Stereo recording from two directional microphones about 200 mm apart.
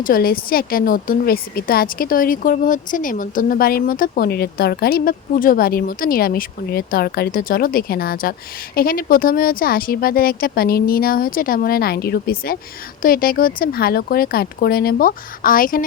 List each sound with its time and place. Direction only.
0.0 s a woman's voice: 45° left (ahead or behind)